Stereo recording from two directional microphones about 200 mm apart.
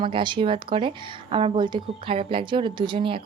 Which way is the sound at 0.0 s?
25° right (ahead or behind).